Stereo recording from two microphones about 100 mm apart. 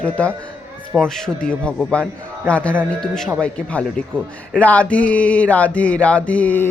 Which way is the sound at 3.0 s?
5° left (ahead or behind).